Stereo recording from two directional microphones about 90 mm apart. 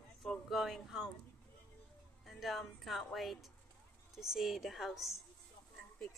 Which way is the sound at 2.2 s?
Centre (ahead or behind).